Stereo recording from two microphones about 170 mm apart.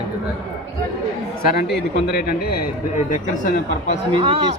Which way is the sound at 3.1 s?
50° left (ahead or behind).